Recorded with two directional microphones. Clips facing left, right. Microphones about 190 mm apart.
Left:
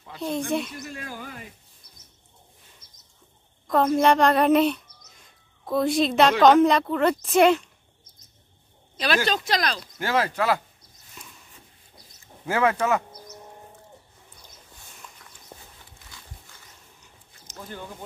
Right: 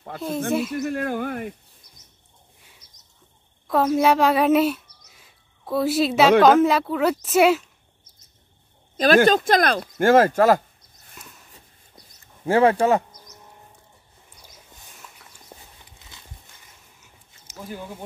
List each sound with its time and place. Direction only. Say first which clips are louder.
0.5 s speech: right 4 dB; 5° right (ahead or behind)
0.8 s speech: right 12 dB; 60° right (ahead or behind)
2.8 s a sound: even; 40° right (ahead or behind)
3.6 s speech: right 1 dB; 5° right (ahead or behind)
8.9 s speech: right 9 dB; 45° right (ahead or behind)
12.4 s speech: right 5 dB; 30° right (ahead or behind)
15.5 s a sound: even; 10° right (ahead or behind)
16.1 s dog: even; 20° right (ahead or behind)
17.0 s a sound: left 1 dB; 5° right (ahead or behind)